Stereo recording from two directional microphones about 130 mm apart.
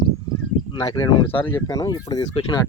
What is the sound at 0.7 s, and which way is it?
Speech, 35° left (ahead or behind).